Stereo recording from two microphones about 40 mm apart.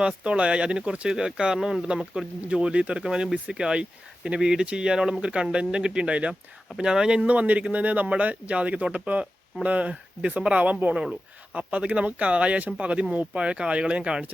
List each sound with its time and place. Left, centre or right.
0.0 s speech: right; by 1.8 s centre
2.5 s speech: right
6.7 s speech: centre
7.3 s speech: right
10.9 s speech: right